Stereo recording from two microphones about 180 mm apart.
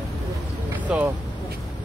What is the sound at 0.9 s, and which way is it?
Speech, 5° right (ahead or behind).